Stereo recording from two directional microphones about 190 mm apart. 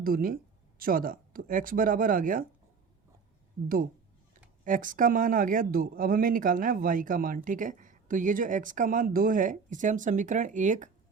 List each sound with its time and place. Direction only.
0.0 s speech: 50° right (ahead or behind)
4.6 s speech: 45° right (ahead or behind)